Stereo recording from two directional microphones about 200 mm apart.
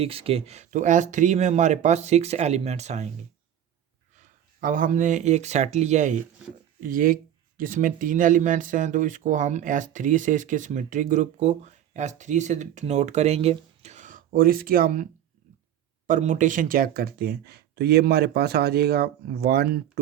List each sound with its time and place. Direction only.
0.0 s speech: 30° right (ahead or behind)
4.2 s speech: 40° right (ahead or behind)
16.0 s speech: 40° right (ahead or behind)